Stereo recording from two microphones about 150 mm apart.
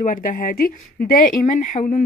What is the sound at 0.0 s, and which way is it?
Speech, 60° left (ahead or behind).